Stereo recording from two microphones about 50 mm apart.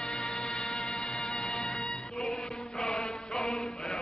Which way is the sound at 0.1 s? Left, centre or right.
Centre.